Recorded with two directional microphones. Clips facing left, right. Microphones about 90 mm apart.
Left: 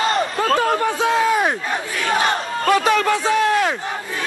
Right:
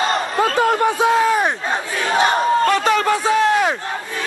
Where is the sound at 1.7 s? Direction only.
25° right (ahead or behind).